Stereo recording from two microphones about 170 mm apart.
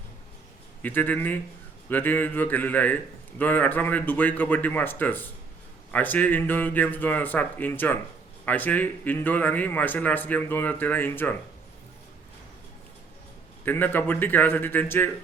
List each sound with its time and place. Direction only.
0.8 s a man's voice: 10° left (ahead or behind)
13.7 s a man's voice: 10° left (ahead or behind)